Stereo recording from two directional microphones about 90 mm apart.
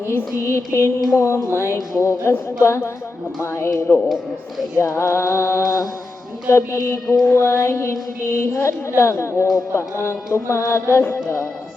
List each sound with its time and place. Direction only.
0.3 s music: 30° left (ahead or behind)